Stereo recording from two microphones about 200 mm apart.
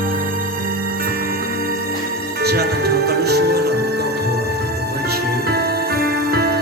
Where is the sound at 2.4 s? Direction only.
55° right (ahead or behind).